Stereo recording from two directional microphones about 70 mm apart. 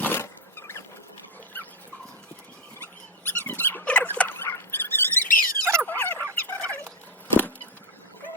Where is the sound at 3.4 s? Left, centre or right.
Left.